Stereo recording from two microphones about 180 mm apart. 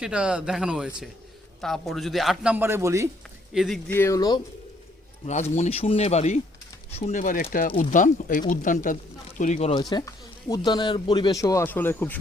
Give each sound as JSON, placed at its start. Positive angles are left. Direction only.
{"t": 0.0, "sound": "a man's voice", "side_deg": -5}
{"t": 3.5, "sound": "a man's voice", "side_deg": 0}
{"t": 3.9, "sound": "speech", "side_deg": 15}
{"t": 5.2, "sound": "a man's voice", "side_deg": 40}
{"t": 9.7, "sound": "speech", "side_deg": 20}